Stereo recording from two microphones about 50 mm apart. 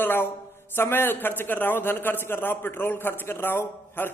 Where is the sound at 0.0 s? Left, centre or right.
Left.